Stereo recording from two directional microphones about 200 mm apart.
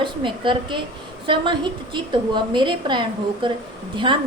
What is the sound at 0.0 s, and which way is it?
A woman's voice, 25° right (ahead or behind).